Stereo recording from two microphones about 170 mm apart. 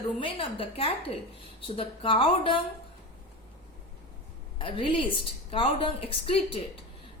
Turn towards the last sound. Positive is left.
turn(degrees=30)  # may be behind; listen again after turning